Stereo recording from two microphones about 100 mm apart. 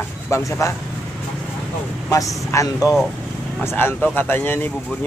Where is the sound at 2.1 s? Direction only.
35° left (ahead or behind).